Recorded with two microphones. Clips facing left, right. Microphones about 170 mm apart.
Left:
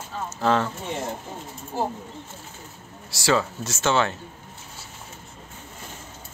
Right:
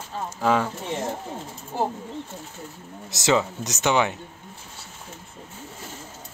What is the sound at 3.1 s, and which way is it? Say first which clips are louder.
Speech: right 1 dB; 20° right (ahead or behind).